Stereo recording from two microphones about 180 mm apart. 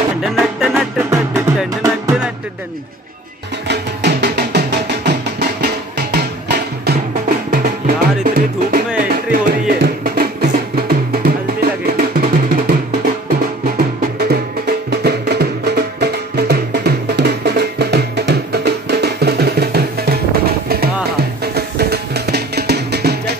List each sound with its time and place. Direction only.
0.2 s music: centre (ahead or behind)
3.6 s music: 65° right (ahead or behind)